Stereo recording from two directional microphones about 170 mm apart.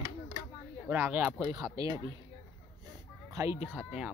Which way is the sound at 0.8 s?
10° right (ahead or behind).